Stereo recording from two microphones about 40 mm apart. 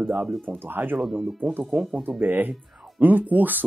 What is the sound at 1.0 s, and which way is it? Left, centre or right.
Speech, centre.